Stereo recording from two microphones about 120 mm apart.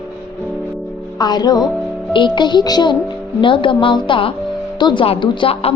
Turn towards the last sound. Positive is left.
turn(degrees=45)  # may be behind; listen again after turning